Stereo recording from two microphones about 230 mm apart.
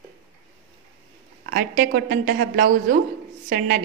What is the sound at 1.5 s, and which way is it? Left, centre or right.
A woman's voice, right.